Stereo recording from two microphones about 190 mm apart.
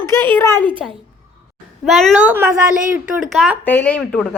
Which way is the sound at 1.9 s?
Centre (ahead or behind).